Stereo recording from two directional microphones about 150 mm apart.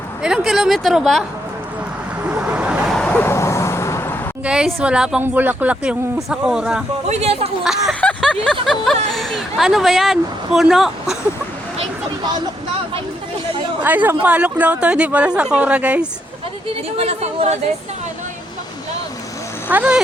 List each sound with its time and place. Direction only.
0.2 s speech: 5° right (ahead or behind)
2.3 s vehicle: 10° right (ahead or behind); by 4.2 s 15° left (ahead or behind)
4.4 s speech: 5° right (ahead or behind)
7.1 s speech: 45° right (ahead or behind)
7.6 s speech: centre (ahead or behind)
8.0 s vehicle: 5° left (ahead or behind)
8.6 s speech: centre (ahead or behind)
13.8 s speech: 10° right (ahead or behind)
17.0 s speech: 45° right (ahead or behind)
19.7 s speech: 10° right (ahead or behind)